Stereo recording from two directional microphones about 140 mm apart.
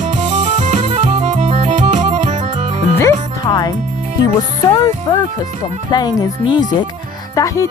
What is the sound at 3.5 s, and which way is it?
Music, 30° left (ahead or behind).